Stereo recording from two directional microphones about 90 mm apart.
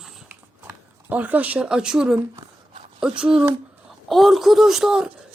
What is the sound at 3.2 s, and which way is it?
Speech, 10° right (ahead or behind).